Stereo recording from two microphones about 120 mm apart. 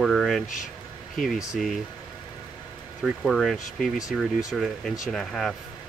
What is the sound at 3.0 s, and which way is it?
Speech, centre (ahead or behind).